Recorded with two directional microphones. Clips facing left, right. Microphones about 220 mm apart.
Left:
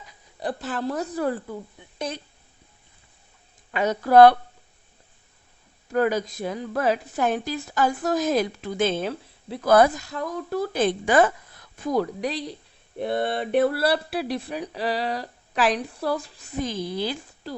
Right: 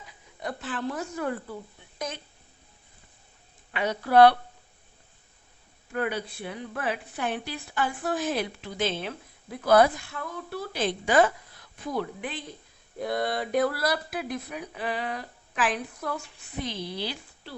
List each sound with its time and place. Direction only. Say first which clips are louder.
0.3 s a woman's voice: left 5 dB; 35° left (ahead or behind)
3.7 s a woman's voice: left 5 dB; 40° left (ahead or behind)
5.9 s a woman's voice: left 7 dB; 40° left (ahead or behind)
11.9 s speech: left 7 dB; 40° left (ahead or behind)
13.0 s a sound: left 3 dB; 25° left (ahead or behind)
13.6 s speech: left 5 dB; 30° left (ahead or behind); by 17.5 s 45° left (ahead or behind)